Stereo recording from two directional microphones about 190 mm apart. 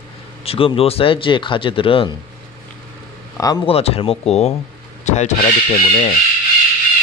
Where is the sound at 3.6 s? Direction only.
30° left (ahead or behind).